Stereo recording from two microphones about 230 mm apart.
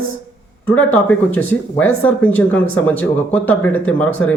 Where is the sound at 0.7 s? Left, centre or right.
Centre.